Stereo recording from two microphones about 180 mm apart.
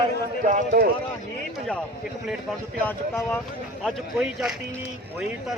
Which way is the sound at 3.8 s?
Centre (ahead or behind).